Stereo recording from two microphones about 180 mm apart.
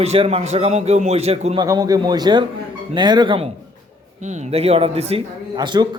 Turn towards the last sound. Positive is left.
turn(degrees=-25)  # may be behind; listen again after turning